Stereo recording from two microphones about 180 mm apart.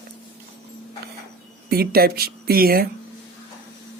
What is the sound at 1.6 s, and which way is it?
Speech, 60° right (ahead or behind).